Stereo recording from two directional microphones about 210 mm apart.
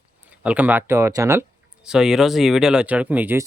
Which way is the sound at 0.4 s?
5° right (ahead or behind).